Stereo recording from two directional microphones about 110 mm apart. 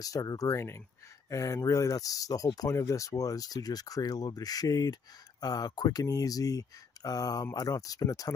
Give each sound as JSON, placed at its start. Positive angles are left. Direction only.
{"t": 0.0, "sound": "speech", "side_deg": 35}